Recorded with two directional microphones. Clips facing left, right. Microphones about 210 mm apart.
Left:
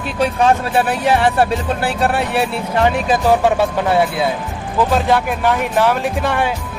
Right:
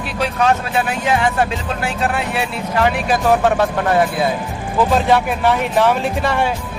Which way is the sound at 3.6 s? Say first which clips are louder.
Even; 10° left (ahead or behind).